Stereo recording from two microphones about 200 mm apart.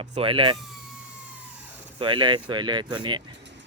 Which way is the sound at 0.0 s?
30° right (ahead or behind).